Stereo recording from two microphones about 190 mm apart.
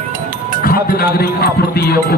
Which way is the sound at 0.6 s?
50° left (ahead or behind).